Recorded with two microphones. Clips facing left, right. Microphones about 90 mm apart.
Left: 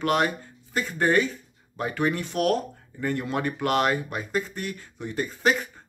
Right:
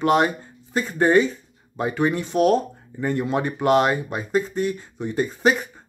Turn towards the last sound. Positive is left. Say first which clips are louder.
# right 4 dB
turn(degrees=-20)  # may be behind; listen again after turning